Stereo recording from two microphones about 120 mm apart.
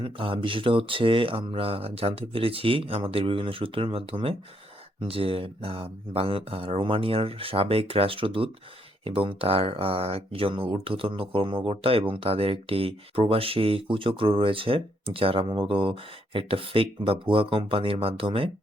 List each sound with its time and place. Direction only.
0.0 s speech: 45° right (ahead or behind)